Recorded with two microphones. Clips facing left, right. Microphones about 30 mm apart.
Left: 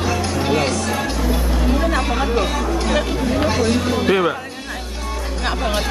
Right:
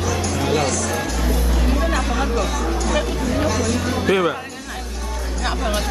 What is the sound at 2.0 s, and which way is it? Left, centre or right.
Music, left.